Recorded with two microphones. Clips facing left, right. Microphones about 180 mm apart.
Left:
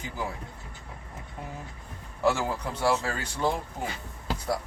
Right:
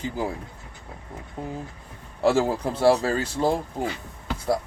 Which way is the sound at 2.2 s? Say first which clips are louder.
Right 5 dB; 30° right (ahead or behind).